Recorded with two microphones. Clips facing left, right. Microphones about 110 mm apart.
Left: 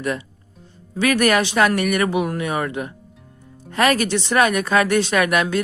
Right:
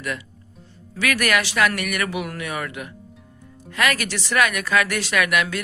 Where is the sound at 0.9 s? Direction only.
30° left (ahead or behind).